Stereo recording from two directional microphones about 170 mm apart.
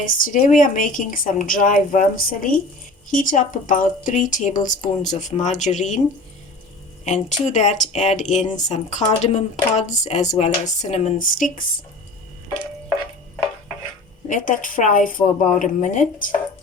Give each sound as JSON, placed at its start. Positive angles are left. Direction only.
{"t": 0.0, "sound": "speech", "side_deg": 50}
{"t": 7.0, "sound": "speech", "side_deg": 45}
{"t": 14.3, "sound": "speech", "side_deg": 50}